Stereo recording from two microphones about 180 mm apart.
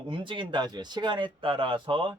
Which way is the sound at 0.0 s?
25° right (ahead or behind).